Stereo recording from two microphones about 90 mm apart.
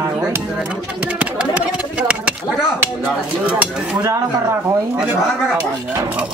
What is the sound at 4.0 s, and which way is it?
Speech, 35° right (ahead or behind).